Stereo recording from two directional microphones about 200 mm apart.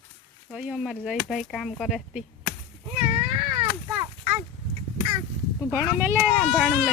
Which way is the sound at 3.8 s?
10° right (ahead or behind).